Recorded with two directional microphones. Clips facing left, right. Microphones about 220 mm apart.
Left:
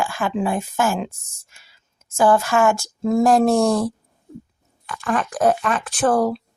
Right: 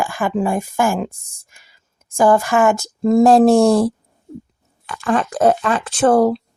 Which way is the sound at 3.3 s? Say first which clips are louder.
Right 5 dB; 30° right (ahead or behind).